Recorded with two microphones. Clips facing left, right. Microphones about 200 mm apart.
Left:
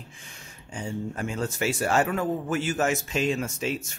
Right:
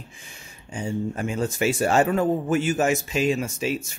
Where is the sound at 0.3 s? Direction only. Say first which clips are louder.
Right 3 dB; 10° right (ahead or behind).